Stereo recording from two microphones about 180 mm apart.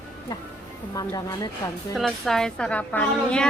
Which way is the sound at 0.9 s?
20° left (ahead or behind).